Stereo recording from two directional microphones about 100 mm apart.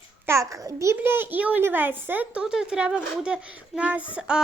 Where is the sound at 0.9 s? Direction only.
20° right (ahead or behind).